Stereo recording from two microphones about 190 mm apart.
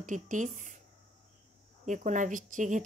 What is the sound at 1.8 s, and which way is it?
Speech, 40° right (ahead or behind).